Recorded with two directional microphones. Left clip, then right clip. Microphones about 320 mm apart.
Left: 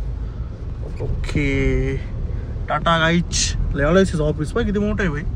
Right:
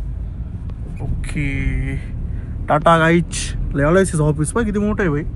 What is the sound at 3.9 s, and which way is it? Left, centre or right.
Speech, right.